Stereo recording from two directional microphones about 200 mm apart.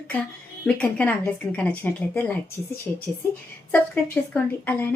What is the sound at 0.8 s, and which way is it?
A woman's voice, 10° left (ahead or behind).